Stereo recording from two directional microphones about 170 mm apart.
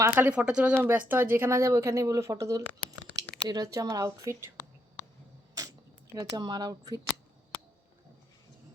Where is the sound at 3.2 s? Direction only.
90° right.